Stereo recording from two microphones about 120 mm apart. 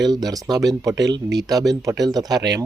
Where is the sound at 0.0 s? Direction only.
35° right (ahead or behind).